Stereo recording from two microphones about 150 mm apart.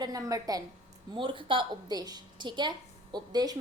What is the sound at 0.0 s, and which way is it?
Speech, 25° right (ahead or behind).